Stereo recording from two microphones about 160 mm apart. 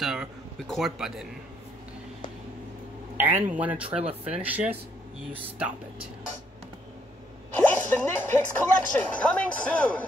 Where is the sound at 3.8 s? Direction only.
40° right (ahead or behind).